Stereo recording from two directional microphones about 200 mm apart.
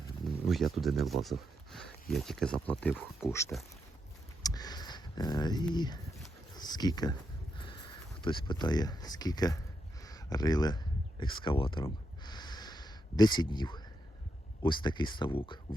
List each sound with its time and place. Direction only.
0.4 s speech: centre (ahead or behind)
4.4 s a sound: 20° left (ahead or behind)
14.6 s speech: 25° left (ahead or behind)